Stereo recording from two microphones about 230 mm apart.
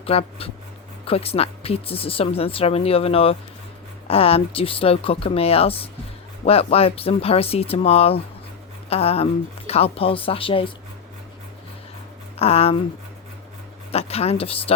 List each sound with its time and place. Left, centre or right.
0.0 s a woman's voice: left
12.4 s a woman's voice: left
13.9 s a woman's voice: left